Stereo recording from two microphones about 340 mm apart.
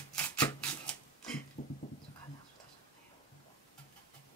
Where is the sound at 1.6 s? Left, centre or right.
Left.